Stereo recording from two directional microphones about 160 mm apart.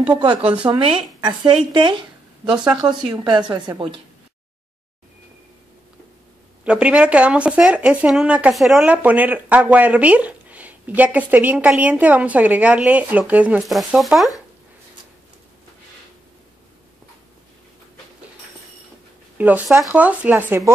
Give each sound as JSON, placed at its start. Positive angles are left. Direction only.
{"t": 0.2, "sound": "a woman's voice", "side_deg": -35}
{"t": 6.6, "sound": "speech", "side_deg": -5}
{"t": 19.3, "sound": "speech", "side_deg": -10}